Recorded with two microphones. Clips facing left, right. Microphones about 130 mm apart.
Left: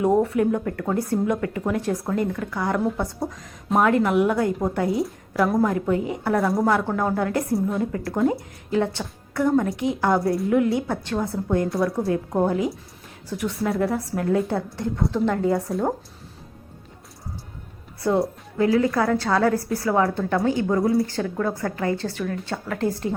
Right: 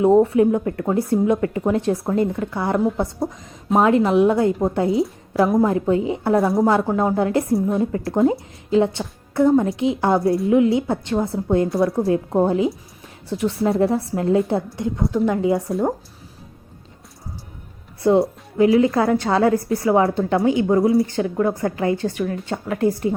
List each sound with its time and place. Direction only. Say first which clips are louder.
0.0 s speech: right 5 dB; 25° right (ahead or behind)
18.5 s speech: right 4 dB; 15° right (ahead or behind)
20.8 s speech: right 4 dB; centre (ahead or behind)
21.1 s speech: right 5 dB; 20° right (ahead or behind)